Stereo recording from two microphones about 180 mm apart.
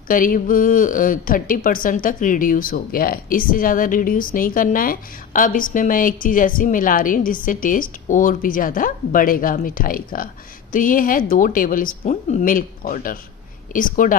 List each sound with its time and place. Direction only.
0.1 s speech: 50° left (ahead or behind)